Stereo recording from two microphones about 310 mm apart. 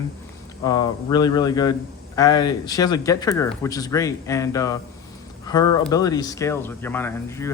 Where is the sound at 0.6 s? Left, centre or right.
Centre.